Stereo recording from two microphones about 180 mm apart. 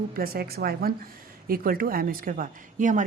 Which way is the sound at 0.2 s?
55° right (ahead or behind).